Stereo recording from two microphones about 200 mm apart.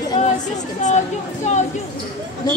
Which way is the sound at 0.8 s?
35° left (ahead or behind).